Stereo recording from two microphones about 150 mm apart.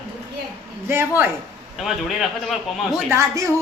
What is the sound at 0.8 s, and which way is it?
Speech, 15° right (ahead or behind).